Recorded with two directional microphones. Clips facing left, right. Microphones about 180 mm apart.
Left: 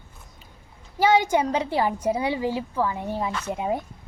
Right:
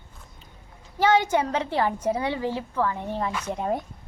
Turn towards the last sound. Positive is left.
turn(degrees=5)  # may be behind; listen again after turning